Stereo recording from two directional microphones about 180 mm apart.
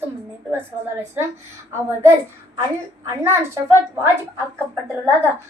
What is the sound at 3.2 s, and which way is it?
Speech, 15° right (ahead or behind).